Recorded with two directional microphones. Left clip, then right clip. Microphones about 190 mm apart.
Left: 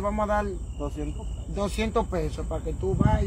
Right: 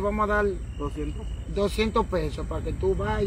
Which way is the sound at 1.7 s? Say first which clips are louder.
Right 2 dB; 25° left (ahead or behind).